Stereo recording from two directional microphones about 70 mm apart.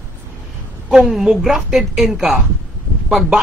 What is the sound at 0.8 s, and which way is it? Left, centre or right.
A man's voice, centre.